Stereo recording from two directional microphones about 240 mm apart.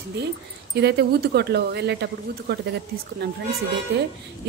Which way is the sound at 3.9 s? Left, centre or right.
Right.